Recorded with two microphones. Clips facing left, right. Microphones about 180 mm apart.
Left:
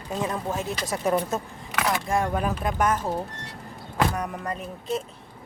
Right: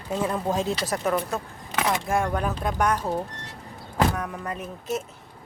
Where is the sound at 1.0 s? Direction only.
20° left (ahead or behind).